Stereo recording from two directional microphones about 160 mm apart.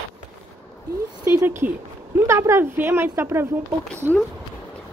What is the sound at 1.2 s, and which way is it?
A woman's voice, 15° right (ahead or behind).